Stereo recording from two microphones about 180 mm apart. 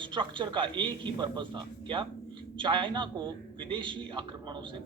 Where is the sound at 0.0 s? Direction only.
25° right (ahead or behind).